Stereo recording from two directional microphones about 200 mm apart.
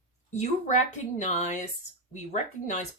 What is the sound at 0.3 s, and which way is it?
A woman's voice, 35° left (ahead or behind).